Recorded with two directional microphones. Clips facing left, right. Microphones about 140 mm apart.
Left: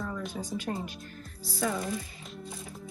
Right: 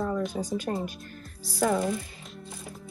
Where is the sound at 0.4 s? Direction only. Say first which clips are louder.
Right 4 dB; 45° right (ahead or behind).